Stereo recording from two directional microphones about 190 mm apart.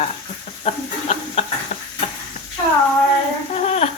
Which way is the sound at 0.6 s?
35° left (ahead or behind).